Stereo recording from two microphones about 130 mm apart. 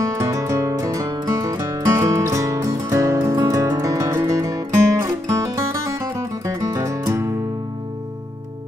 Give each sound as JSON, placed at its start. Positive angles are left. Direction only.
{"t": 0.0, "sound": "music", "side_deg": -25}